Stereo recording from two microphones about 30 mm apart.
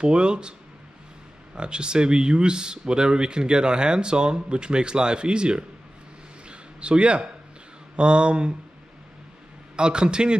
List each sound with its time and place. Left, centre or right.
0.0 s speech: right
6.5 s a sound: right
7.9 s speech: right
9.8 s speech: right